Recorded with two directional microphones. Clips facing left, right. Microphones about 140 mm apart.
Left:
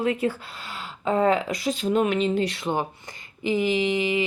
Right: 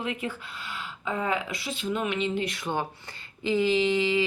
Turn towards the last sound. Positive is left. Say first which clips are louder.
# left 1 dB
turn(degrees=20)  # may be behind; listen again after turning